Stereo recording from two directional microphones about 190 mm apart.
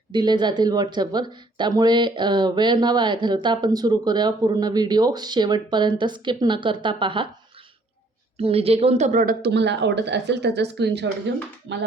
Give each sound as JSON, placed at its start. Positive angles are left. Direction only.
{"t": 0.1, "sound": "speech", "side_deg": -20}
{"t": 8.4, "sound": "a woman's voice", "side_deg": -30}
{"t": 9.4, "sound": "a woman's voice", "side_deg": -65}